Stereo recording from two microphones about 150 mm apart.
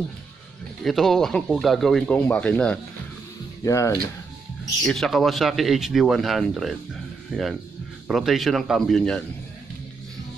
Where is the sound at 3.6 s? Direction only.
20° left (ahead or behind).